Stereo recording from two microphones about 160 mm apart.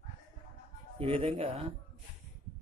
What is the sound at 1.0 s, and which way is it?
Speech, 35° right (ahead or behind).